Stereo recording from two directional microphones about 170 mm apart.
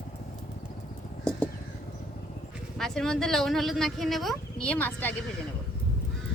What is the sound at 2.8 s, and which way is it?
Speech, 5° left (ahead or behind).